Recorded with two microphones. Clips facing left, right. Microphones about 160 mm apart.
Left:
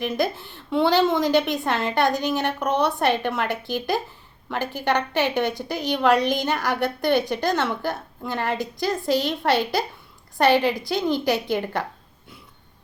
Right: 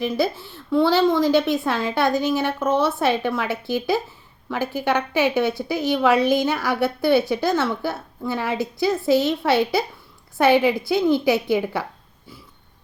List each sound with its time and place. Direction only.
0.1 s a woman's voice: centre (ahead or behind)
2.6 s speech: 15° left (ahead or behind)
3.1 s a woman's voice: 5° right (ahead or behind)